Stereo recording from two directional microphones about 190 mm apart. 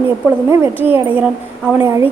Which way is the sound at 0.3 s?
10° right (ahead or behind).